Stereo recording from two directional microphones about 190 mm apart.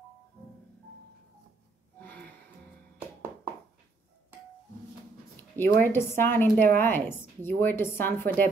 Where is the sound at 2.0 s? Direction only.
10° left (ahead or behind).